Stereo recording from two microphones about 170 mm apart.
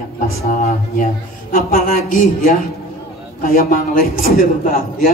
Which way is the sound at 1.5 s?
55° left (ahead or behind).